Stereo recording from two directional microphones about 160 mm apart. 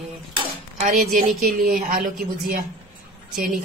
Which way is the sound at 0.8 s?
55° right (ahead or behind).